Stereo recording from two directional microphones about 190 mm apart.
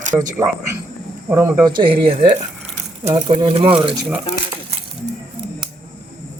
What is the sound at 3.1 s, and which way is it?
Speech, 25° right (ahead or behind).